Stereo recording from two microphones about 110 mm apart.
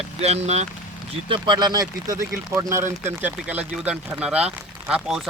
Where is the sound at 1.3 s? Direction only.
45° right (ahead or behind).